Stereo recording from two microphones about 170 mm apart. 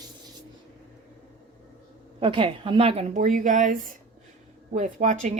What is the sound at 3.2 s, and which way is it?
Speech, 50° right (ahead or behind).